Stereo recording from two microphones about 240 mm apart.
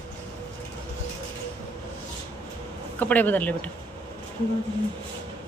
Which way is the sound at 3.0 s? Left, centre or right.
Centre.